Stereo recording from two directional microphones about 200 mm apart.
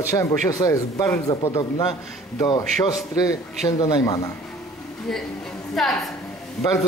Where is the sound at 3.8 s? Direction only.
20° left (ahead or behind).